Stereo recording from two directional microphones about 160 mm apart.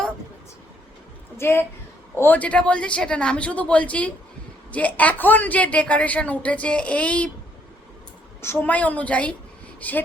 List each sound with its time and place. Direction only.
1.4 s a woman's voice: 15° left (ahead or behind)
8.4 s a woman's voice: 15° left (ahead or behind)